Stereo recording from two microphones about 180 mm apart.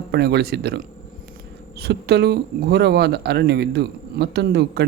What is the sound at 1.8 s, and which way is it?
Speech, 65° right (ahead or behind).